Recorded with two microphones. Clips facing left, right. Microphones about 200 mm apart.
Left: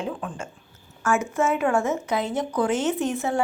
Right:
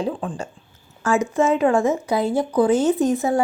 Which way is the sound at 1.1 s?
15° right (ahead or behind).